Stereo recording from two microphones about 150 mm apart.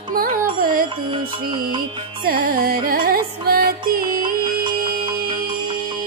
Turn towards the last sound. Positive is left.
turn(degrees=-30)  # may be behind; listen again after turning